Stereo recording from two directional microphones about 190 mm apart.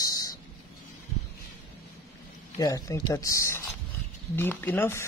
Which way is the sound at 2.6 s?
15° left (ahead or behind).